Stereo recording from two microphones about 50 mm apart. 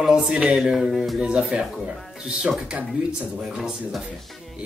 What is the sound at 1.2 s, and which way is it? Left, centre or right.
Speech, right.